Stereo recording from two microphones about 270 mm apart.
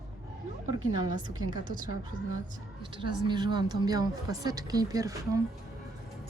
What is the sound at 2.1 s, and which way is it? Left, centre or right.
Speech, right.